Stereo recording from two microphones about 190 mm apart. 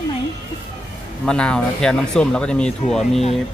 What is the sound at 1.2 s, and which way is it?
Speech, 5° left (ahead or behind).